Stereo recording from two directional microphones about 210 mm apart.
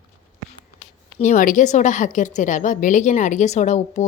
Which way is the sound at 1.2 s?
40° left (ahead or behind).